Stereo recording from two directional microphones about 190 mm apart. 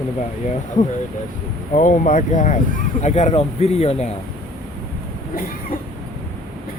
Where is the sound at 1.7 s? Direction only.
45° left (ahead or behind).